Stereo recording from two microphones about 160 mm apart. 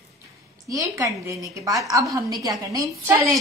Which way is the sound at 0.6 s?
20° right (ahead or behind).